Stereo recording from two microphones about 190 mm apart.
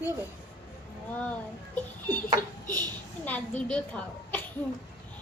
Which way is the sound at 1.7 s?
10° left (ahead or behind).